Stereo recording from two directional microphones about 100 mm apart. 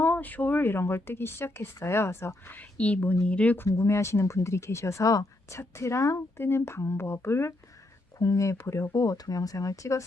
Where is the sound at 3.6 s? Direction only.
25° left (ahead or behind).